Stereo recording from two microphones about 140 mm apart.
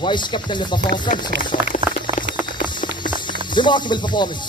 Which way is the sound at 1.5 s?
80° left.